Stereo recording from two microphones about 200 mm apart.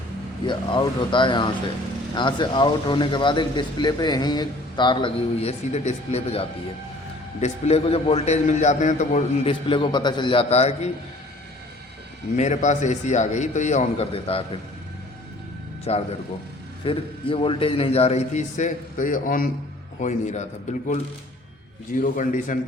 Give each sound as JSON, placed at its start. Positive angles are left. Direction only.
{"t": 0.4, "sound": "a man's voice", "side_deg": 25}
{"t": 12.4, "sound": "a man's voice", "side_deg": 35}
{"t": 15.8, "sound": "a man's voice", "side_deg": 30}
{"t": 22.0, "sound": "a man's voice", "side_deg": 40}